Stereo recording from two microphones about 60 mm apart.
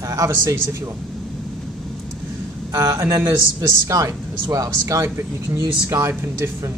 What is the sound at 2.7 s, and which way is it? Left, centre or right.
Speech, right.